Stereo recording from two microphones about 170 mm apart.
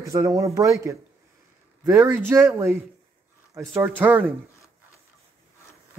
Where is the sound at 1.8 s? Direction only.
15° right (ahead or behind).